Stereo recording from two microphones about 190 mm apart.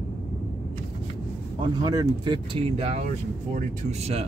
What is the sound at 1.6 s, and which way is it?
Speech, 20° right (ahead or behind).